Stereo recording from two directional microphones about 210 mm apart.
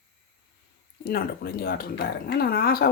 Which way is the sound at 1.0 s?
45° left (ahead or behind).